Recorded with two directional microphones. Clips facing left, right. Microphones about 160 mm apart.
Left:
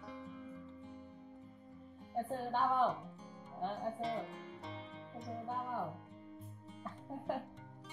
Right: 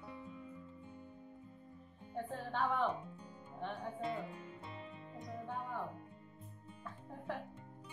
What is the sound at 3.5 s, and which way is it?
Music, 35° left (ahead or behind).